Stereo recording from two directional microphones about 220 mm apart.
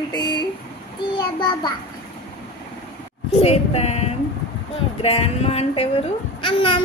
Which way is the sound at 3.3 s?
25° left (ahead or behind).